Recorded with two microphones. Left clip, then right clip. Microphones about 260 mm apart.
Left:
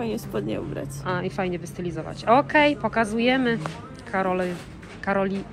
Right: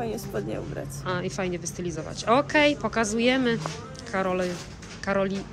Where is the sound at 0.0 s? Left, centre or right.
Left.